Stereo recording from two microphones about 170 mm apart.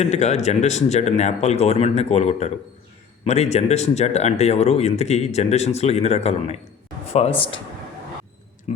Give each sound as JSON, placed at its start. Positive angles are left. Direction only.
{"t": 0.0, "sound": "speech", "side_deg": 40}